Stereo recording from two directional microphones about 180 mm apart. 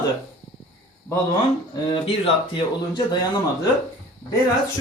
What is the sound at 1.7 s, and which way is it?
Speech, 20° left (ahead or behind).